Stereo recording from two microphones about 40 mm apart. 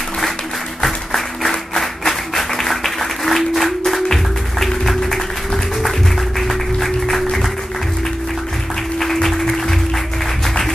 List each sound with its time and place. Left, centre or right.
0.8 s applause: centre
6.4 s music: centre
9.0 s music: centre